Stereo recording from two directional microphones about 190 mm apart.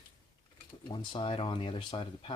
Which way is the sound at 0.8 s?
25° left (ahead or behind).